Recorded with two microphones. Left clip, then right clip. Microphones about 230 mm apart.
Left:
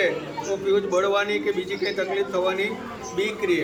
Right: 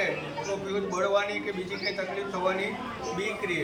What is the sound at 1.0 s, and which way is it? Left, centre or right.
Speech, centre.